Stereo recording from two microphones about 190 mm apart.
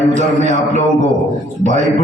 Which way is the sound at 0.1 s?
40° right (ahead or behind).